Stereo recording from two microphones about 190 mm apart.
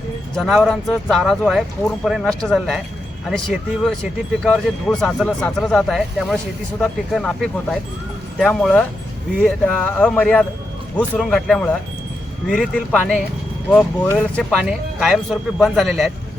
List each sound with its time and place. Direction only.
0.3 s speech: centre (ahead or behind)
14.6 s speech: 5° right (ahead or behind)